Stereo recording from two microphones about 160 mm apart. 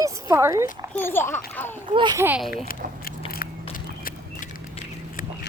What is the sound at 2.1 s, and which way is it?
Speech, 15° right (ahead or behind).